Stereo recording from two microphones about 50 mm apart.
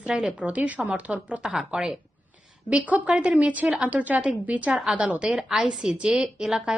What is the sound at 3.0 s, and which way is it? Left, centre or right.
A woman's voice, right.